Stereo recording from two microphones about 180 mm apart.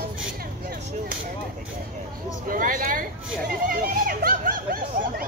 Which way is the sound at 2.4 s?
50° right (ahead or behind).